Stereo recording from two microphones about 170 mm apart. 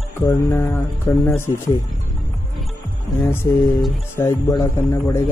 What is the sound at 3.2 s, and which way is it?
Speech, 15° left (ahead or behind).